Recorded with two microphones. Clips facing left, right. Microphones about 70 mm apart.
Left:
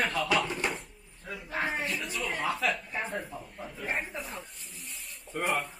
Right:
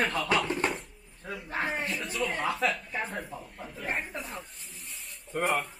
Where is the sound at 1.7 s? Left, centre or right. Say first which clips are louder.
Even; centre.